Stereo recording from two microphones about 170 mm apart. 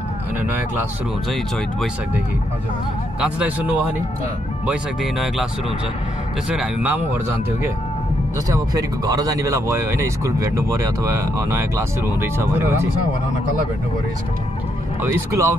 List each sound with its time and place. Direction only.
3.2 s speech: 5° right (ahead or behind)
6.5 s speech: 5° right (ahead or behind)
8.5 s speech: 20° right (ahead or behind)
15.0 s speech: 15° right (ahead or behind)